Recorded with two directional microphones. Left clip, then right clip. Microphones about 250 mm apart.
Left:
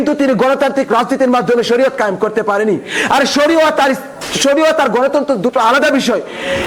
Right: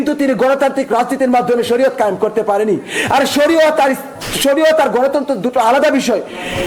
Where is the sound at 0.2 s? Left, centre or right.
Left.